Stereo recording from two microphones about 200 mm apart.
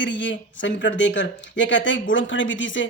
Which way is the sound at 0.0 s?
65° left (ahead or behind).